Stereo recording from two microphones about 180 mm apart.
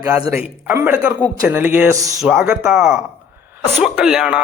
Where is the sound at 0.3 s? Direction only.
5° right (ahead or behind).